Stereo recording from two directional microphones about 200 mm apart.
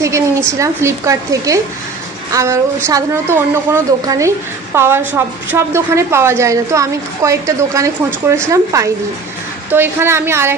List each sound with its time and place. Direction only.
0.5 s a woman's voice: 15° right (ahead or behind)